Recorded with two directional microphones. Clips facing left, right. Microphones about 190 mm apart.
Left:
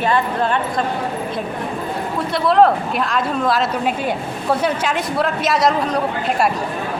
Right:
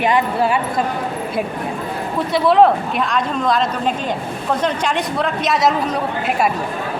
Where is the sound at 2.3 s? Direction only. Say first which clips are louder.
Right 1 dB; centre (ahead or behind).